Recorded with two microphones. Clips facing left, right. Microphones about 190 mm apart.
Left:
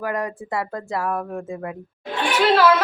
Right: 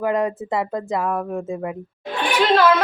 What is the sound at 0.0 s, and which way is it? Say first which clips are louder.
Speech: right 5 dB; 20° right (ahead or behind).